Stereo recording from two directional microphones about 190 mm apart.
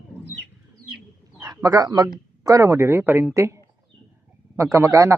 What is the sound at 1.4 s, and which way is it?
A man's voice, 20° right (ahead or behind).